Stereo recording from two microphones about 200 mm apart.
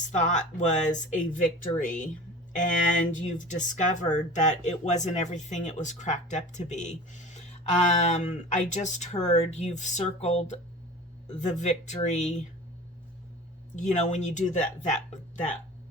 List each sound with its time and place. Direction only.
0.1 s speech: 35° left (ahead or behind)
13.7 s speech: 35° left (ahead or behind)